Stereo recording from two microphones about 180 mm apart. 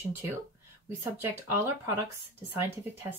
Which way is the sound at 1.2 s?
15° right (ahead or behind).